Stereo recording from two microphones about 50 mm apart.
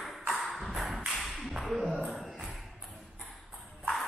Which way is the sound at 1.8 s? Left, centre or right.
Right.